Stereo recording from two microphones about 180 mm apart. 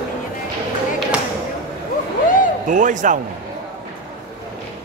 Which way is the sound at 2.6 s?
45° right (ahead or behind).